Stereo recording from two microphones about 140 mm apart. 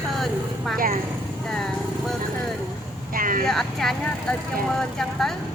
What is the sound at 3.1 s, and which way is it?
Speech, 80° right.